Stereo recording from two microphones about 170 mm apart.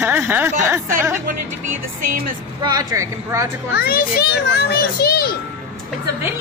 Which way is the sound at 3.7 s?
60° left (ahead or behind).